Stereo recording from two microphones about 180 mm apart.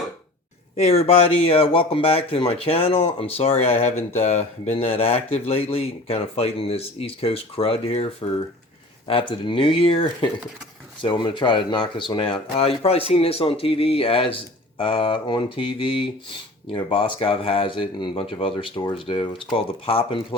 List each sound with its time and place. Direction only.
0.8 s speech: 35° left (ahead or behind)